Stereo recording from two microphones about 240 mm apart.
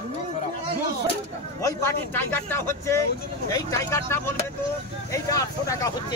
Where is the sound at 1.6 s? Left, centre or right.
Centre.